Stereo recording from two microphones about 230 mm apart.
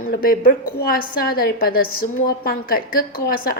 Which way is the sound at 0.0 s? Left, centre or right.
Left.